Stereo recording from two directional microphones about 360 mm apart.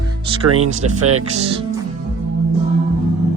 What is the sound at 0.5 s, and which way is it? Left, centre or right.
Speech, right.